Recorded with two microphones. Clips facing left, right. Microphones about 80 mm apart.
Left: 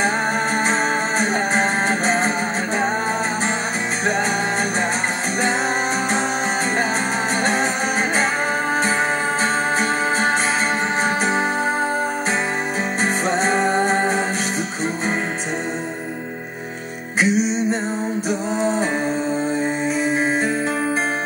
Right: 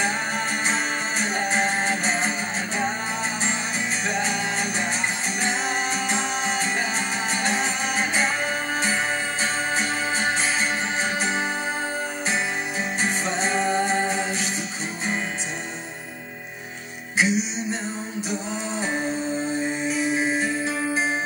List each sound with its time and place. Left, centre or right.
1.2 s music: left
13.0 s music: left
17.2 s music: left
19.9 s music: left